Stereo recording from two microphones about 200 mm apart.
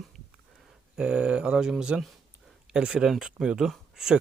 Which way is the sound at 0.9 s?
5° right (ahead or behind).